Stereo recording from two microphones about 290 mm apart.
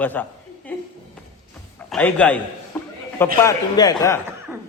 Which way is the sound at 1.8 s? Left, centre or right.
Centre.